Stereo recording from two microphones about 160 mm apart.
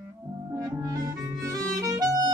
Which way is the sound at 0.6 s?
20° right (ahead or behind).